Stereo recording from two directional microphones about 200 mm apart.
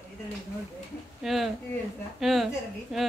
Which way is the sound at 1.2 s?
Centre (ahead or behind).